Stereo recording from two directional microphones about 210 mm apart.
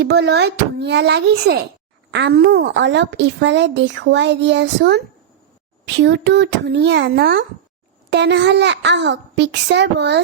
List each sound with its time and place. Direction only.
0.0 s a child's voice: 50° right (ahead or behind)